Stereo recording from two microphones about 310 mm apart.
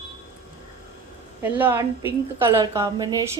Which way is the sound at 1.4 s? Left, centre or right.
Centre.